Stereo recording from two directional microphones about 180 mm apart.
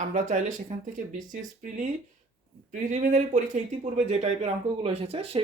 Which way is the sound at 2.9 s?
45° right (ahead or behind).